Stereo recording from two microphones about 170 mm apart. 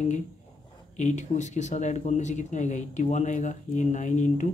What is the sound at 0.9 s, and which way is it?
Speech, 45° left (ahead or behind).